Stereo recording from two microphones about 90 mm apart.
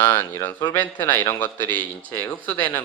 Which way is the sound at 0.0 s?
25° left (ahead or behind).